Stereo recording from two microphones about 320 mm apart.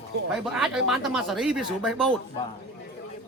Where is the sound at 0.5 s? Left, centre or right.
Centre.